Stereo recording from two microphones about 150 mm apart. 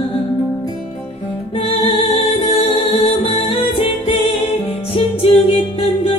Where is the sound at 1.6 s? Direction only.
40° left (ahead or behind).